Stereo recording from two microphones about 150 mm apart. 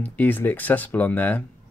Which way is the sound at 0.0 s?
10° left (ahead or behind).